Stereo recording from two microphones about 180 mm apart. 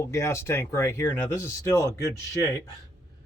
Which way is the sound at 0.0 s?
15° left (ahead or behind).